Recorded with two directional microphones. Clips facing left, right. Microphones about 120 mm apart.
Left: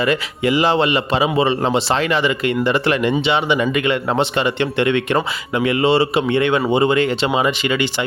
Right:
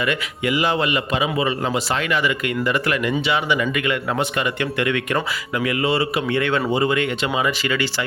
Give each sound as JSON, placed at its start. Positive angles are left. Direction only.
{"t": 0.0, "sound": "a man's voice", "side_deg": 30}